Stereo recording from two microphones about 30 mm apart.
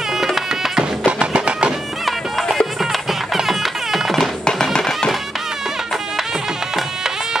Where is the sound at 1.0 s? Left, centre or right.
Right.